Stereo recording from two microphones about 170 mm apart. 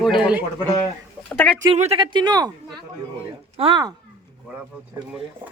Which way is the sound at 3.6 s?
25° right (ahead or behind).